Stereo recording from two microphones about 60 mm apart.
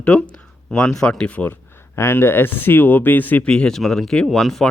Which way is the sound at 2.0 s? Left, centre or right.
Left.